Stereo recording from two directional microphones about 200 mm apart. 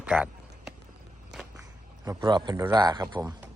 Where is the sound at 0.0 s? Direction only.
5° right (ahead or behind).